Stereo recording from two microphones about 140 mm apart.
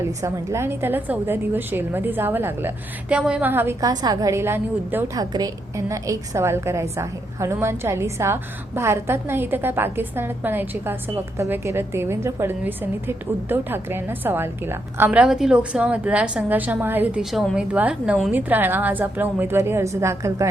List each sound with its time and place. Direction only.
0.0 s a woman's voice: 20° right (ahead or behind)
5.1 s a woman's voice: 30° right (ahead or behind)